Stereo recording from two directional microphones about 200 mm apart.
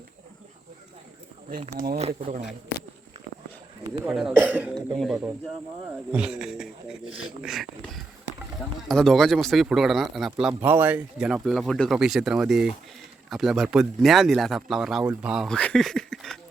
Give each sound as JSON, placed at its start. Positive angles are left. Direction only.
{"t": 1.7, "sound": "speech", "side_deg": -50}
{"t": 2.0, "sound": "speech", "side_deg": -30}
{"t": 4.1, "sound": "speech", "side_deg": -5}